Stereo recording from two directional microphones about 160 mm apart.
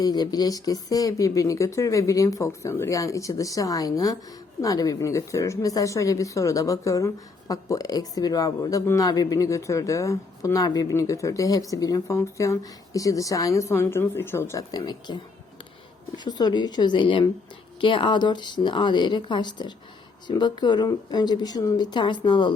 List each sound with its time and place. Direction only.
0.0 s a woman's voice: 25° left (ahead or behind)